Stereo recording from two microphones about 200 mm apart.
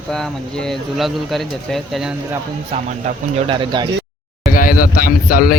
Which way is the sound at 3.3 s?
25° right (ahead or behind).